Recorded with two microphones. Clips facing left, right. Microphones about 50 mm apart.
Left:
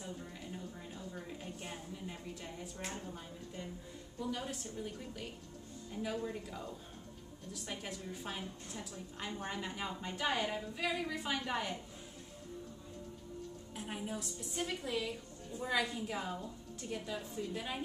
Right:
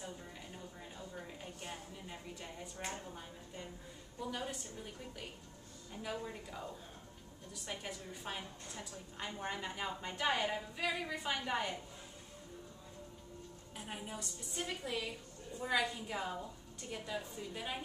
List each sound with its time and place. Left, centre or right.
0.9 s a sound: centre
2.8 s a woman's voice: centre
6.0 s a woman's voice: centre
13.7 s a woman's voice: centre